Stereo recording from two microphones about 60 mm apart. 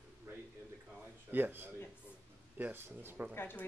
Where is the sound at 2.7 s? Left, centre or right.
Right.